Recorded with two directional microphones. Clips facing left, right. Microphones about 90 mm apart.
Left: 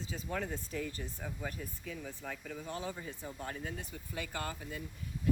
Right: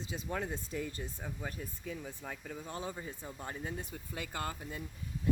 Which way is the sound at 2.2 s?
10° right (ahead or behind).